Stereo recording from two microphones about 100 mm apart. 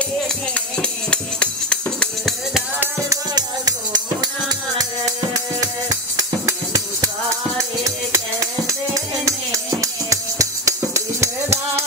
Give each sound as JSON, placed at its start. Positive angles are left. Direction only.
{"t": 0.6, "sound": "music", "side_deg": 10}
{"t": 3.1, "sound": "music", "side_deg": -40}
{"t": 6.1, "sound": "music", "side_deg": -40}
{"t": 8.1, "sound": "music", "side_deg": -30}